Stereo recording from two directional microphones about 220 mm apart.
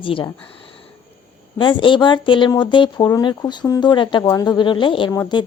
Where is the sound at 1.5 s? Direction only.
20° left (ahead or behind).